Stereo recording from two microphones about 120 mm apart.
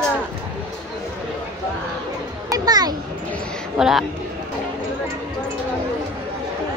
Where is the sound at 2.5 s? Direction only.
35° right (ahead or behind).